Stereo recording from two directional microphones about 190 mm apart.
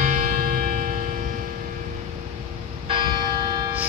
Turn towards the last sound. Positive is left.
turn(degrees=-25)  # may be behind; listen again after turning